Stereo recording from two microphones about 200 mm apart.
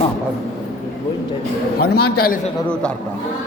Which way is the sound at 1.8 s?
50° left (ahead or behind).